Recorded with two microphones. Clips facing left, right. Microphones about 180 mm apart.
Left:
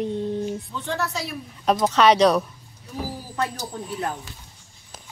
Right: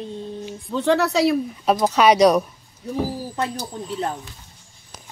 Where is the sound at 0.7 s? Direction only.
75° right (ahead or behind).